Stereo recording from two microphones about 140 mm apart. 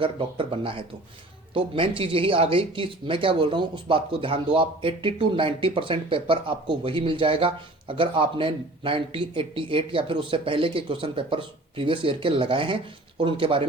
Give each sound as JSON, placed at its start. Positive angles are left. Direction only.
{"t": 0.0, "sound": "speech", "side_deg": -40}